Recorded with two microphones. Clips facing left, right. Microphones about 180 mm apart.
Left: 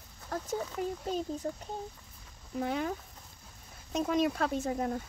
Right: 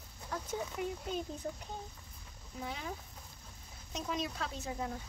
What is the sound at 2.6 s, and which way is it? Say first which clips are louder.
Speech: left 10 dB; 60° left (ahead or behind).